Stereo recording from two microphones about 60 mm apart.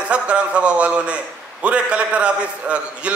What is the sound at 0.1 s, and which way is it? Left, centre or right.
A man's voice, centre.